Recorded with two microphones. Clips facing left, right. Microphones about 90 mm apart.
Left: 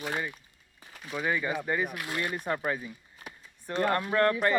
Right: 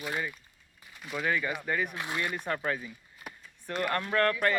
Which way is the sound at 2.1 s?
10° left (ahead or behind).